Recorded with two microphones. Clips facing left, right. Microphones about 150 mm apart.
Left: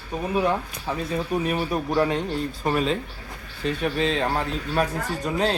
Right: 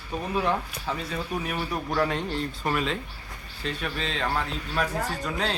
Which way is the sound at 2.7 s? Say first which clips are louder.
Left 5 dB; 30° left (ahead or behind).